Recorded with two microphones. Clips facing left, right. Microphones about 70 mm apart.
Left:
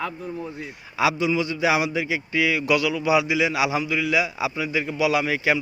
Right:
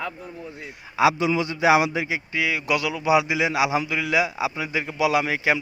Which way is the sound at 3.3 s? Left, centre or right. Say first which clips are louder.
Even; right.